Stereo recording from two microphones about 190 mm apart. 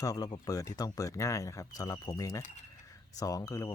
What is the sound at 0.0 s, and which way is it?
Speech, 20° left (ahead or behind).